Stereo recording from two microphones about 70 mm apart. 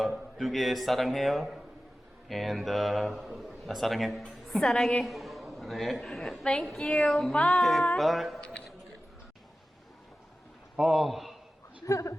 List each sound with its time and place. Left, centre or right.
0.3 s a man's voice: centre
5.0 s a woman's voice: centre
7.1 s a man's voice: centre
7.3 s a woman's voice: centre
7.6 s a man's voice: centre
10.8 s a man's voice: centre
11.9 s a woman's voice: left